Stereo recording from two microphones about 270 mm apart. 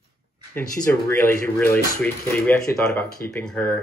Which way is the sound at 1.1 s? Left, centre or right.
Centre.